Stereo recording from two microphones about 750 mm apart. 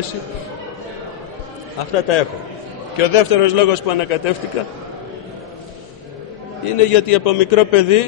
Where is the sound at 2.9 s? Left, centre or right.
Left.